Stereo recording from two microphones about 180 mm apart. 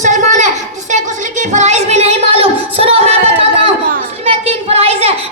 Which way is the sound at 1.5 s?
40° right (ahead or behind).